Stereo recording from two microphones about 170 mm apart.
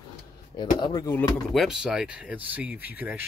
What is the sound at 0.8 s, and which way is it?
Speech, 25° left (ahead or behind).